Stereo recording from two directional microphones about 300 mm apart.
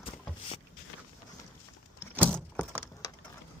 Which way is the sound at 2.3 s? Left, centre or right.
Centre.